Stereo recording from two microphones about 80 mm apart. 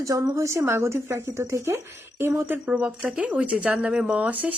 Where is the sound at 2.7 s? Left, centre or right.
Centre.